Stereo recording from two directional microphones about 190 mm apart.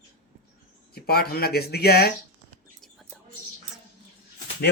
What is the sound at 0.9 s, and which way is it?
A man's voice, 55° left (ahead or behind).